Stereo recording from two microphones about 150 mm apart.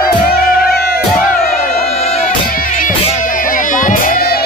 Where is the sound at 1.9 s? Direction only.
45° left (ahead or behind).